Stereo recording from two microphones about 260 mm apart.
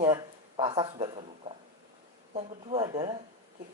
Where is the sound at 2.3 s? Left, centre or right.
Centre.